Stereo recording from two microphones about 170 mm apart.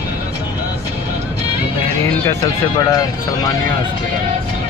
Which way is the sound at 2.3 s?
20° left (ahead or behind).